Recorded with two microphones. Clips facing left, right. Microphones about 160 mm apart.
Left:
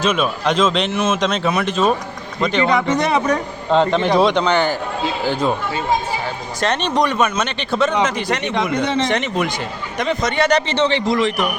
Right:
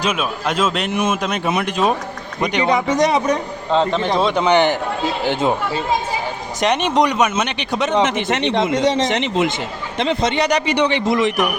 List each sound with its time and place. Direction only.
0.0 s a man's voice: 5° right (ahead or behind)
3.7 s a man's voice: centre (ahead or behind)
4.4 s a man's voice: 20° right (ahead or behind)
6.6 s a man's voice: 15° right (ahead or behind)
10.4 s a man's voice: 15° right (ahead or behind)